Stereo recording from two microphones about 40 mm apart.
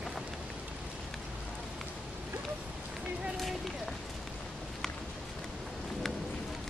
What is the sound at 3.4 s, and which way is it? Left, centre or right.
Run, centre.